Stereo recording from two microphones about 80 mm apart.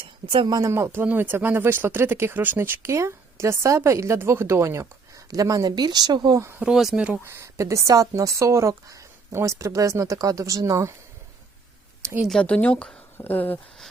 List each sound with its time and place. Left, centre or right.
0.0 s a woman's voice: right
0.7 s speech: right
5.3 s speech: right
5.7 s speech: right
6.7 s speech: centre
7.3 s speech: right
12.3 s speech: centre
13.1 s speech: left